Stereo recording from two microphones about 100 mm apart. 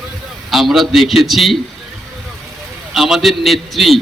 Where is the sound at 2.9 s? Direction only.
Centre (ahead or behind).